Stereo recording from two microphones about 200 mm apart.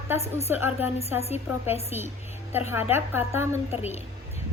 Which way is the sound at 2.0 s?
10° right (ahead or behind).